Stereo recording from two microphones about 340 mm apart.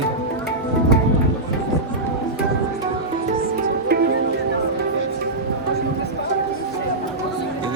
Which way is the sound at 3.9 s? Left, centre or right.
Right.